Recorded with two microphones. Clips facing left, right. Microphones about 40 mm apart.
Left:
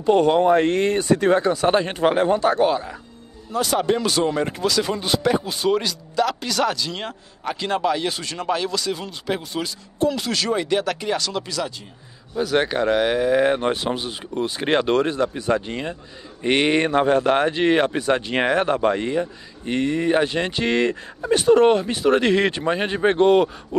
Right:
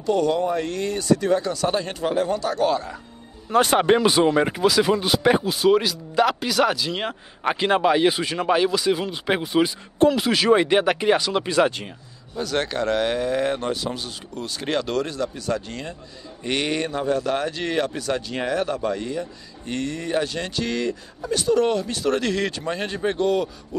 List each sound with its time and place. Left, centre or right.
0.0 s speech: left
2.7 s speech: centre
3.5 s speech: right
4.0 s speech: centre
7.4 s speech: right
10.5 s speech: right
12.4 s speech: centre
13.7 s speech: left
14.0 s speech: left
16.9 s speech: left
17.2 s speech: left
18.3 s speech: left